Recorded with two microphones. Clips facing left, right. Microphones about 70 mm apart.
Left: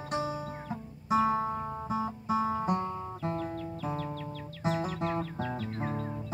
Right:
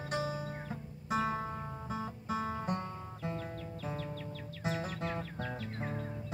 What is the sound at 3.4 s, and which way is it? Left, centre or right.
Music, centre.